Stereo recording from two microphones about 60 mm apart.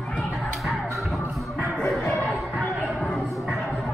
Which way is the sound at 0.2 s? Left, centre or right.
Centre.